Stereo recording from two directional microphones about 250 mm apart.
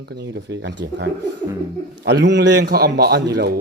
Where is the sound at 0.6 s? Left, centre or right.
Right.